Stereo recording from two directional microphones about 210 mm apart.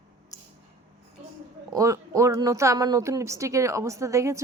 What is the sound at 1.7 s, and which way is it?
A woman's voice, 15° right (ahead or behind).